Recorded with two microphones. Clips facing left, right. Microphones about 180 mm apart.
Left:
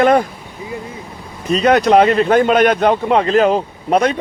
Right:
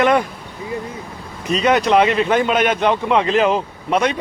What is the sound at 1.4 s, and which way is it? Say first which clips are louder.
Speech: left 3 dB; 35° left (ahead or behind).